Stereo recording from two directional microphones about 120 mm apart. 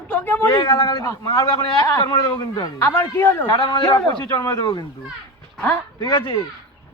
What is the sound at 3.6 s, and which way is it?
A man's voice, 40° left (ahead or behind).